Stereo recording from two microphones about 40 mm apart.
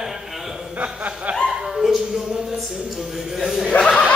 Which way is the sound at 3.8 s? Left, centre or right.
Centre.